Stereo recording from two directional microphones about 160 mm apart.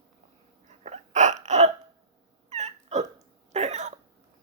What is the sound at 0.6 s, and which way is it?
Hiccup, 45° right (ahead or behind).